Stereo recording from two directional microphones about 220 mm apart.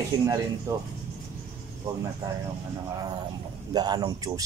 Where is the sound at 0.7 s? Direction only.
15° right (ahead or behind).